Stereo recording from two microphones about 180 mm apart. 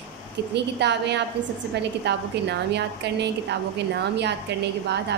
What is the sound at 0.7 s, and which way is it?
A woman's voice, 70° right (ahead or behind).